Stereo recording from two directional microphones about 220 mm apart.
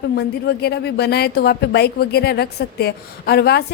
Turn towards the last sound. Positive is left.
turn(degrees=45)  # may be behind; listen again after turning